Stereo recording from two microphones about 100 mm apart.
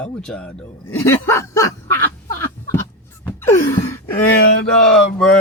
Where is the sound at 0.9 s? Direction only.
25° left (ahead or behind).